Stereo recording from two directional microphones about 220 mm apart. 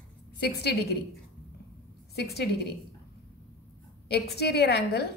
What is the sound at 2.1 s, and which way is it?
Speech, 45° left (ahead or behind).